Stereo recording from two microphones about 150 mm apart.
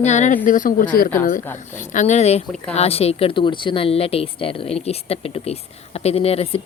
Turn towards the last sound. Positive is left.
turn(degrees=40)  # may be behind; listen again after turning